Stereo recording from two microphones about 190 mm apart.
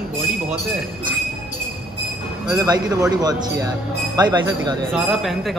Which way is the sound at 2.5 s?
20° right (ahead or behind).